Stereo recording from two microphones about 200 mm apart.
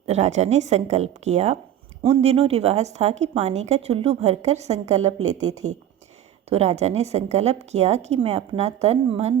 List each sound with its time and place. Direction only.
0.0 s a woman's voice: 35° right (ahead or behind)
6.5 s a woman's voice: 30° right (ahead or behind)